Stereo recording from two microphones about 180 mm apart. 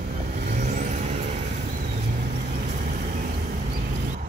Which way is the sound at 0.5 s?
45° right (ahead or behind).